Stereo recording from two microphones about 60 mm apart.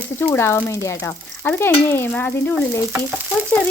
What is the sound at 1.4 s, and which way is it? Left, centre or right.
Speech, left.